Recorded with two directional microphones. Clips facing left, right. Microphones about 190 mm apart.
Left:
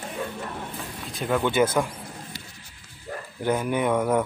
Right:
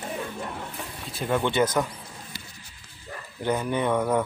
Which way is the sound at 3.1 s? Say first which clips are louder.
Left 5 dB; 45° left (ahead or behind).